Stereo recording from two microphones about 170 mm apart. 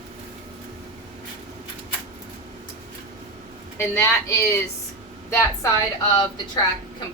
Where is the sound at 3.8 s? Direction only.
15° left (ahead or behind).